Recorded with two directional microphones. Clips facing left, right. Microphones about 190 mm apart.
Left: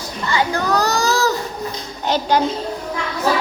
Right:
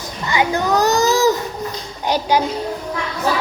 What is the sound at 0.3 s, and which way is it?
A child's voice, 20° right (ahead or behind).